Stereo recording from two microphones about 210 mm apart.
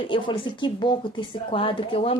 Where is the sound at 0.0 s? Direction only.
25° left (ahead or behind).